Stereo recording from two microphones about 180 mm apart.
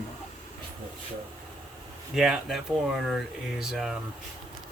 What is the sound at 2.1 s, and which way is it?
Speech, centre (ahead or behind).